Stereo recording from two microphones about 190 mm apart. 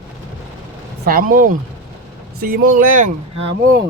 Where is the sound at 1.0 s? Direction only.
50° right (ahead or behind).